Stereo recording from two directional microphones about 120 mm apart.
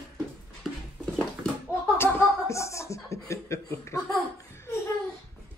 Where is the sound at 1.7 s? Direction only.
20° left (ahead or behind).